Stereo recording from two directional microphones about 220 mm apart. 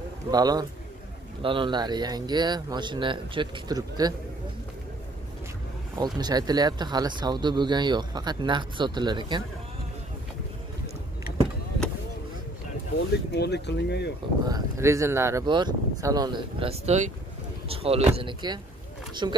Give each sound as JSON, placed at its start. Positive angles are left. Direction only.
{"t": 0.3, "sound": "speech", "side_deg": -20}
{"t": 5.9, "sound": "speech", "side_deg": -20}
{"t": 13.3, "sound": "speech", "side_deg": 50}
{"t": 14.5, "sound": "speech", "side_deg": -15}